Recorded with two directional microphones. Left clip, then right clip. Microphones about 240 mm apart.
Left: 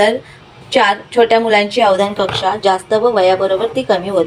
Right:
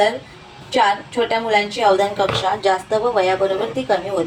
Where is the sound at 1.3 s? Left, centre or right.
Left.